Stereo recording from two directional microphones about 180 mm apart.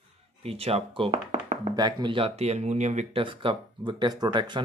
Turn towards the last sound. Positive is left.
turn(degrees=-25)  # may be behind; listen again after turning